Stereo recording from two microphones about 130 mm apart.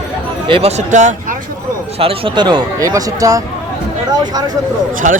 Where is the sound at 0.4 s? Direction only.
40° right (ahead or behind).